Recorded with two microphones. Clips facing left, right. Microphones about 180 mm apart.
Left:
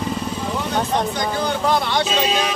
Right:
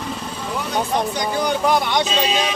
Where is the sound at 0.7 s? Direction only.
15° right (ahead or behind).